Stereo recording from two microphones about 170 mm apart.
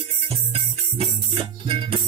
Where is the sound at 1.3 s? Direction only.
30° right (ahead or behind).